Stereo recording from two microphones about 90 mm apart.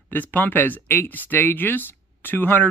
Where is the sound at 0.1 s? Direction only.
20° left (ahead or behind).